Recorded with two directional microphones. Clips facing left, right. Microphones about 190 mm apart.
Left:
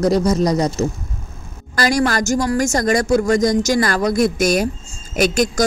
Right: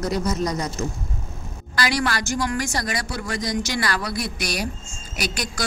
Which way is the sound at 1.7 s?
45° left (ahead or behind).